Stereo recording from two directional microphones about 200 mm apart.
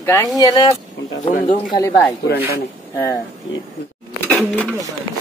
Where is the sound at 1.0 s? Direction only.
60° left (ahead or behind).